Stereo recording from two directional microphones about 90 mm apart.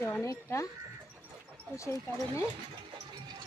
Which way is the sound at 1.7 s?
30° left (ahead or behind).